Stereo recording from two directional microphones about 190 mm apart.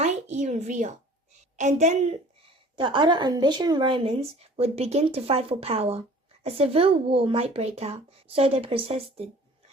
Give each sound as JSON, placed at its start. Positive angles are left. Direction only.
{"t": 0.0, "sound": "a sound", "side_deg": -40}
{"t": 1.5, "sound": "speech", "side_deg": -40}
{"t": 2.7, "sound": "speech", "side_deg": -25}